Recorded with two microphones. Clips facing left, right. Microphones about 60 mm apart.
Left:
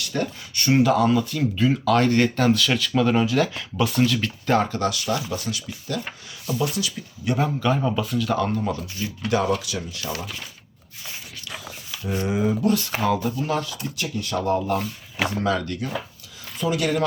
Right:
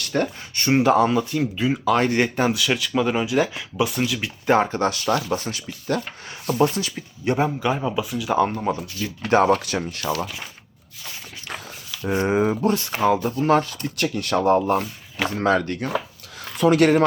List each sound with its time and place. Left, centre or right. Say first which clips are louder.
0.0 s speech: right 3 dB; right
1.5 s speech: left 1 dB; centre
2.5 s speech: left 2 dB; centre
4.4 s speech: right 3 dB; right
7.8 s speech: left 1 dB; centre
8.4 s speech: right 3 dB; right
9.0 s speech: right 5 dB; right
11.4 s dog: right 3 dB; right
12.2 s speech: right 3 dB; right
12.6 s speech: even; right
13.3 s speech: right 7 dB; right
13.8 s speech: right 4 dB; right
14.4 s speech: right 5 dB; right
16.4 s speech: right 8 dB; right